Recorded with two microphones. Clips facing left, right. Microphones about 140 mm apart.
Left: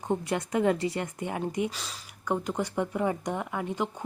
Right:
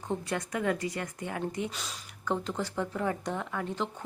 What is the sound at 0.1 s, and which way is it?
Speech, 25° left (ahead or behind).